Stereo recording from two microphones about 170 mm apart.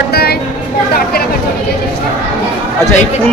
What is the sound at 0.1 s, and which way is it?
Vehicle, 70° left (ahead or behind).